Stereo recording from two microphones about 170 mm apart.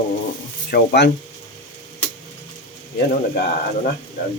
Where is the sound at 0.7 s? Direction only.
85° left.